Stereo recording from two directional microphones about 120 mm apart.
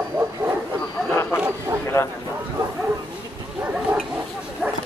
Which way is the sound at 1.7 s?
20° right (ahead or behind).